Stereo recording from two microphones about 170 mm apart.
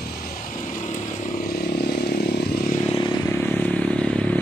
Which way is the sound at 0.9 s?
55° left (ahead or behind).